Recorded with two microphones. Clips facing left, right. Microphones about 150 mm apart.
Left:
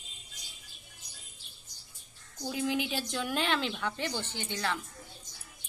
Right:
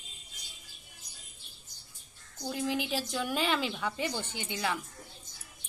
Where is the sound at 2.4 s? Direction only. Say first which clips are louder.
Left 1 dB; centre (ahead or behind).